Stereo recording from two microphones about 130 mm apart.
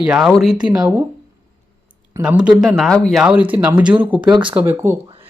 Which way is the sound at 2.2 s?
10° right (ahead or behind).